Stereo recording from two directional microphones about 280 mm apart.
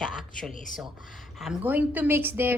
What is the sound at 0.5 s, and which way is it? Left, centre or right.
Speech, left.